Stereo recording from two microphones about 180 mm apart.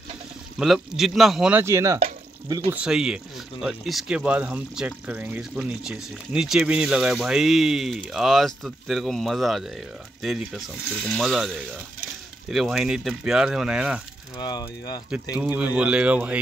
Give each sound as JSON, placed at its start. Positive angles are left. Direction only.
{"t": 0.6, "sound": "speech", "side_deg": 0}
{"t": 2.7, "sound": "speech", "side_deg": -5}
{"t": 14.3, "sound": "speech", "side_deg": 25}
{"t": 15.3, "sound": "speech", "side_deg": -5}